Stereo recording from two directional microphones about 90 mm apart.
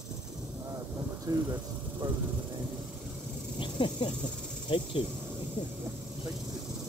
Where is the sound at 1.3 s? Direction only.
45° right (ahead or behind).